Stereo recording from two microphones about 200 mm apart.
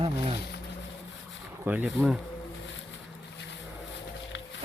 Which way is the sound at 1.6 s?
5° right (ahead or behind).